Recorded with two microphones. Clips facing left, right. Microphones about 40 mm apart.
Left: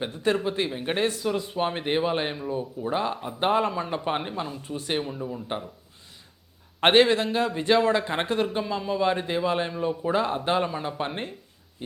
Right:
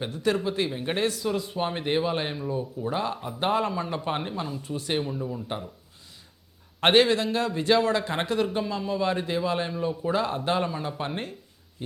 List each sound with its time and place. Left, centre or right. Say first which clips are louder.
0.1 s a man's voice: even; left
0.7 s speech: left 1 dB; centre
6.7 s a man's voice: left 1 dB; left
11.8 s a sound: right 1 dB; centre